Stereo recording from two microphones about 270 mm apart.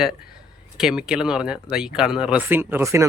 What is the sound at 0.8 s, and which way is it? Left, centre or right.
Speech, centre.